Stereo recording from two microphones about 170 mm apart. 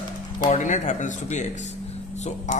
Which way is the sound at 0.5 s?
45° left (ahead or behind).